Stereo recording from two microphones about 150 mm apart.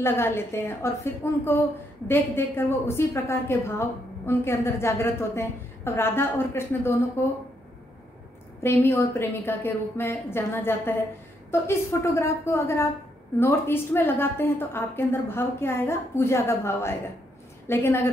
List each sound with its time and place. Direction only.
0.0 s a woman's voice: 15° left (ahead or behind)
8.6 s a woman's voice: 15° left (ahead or behind)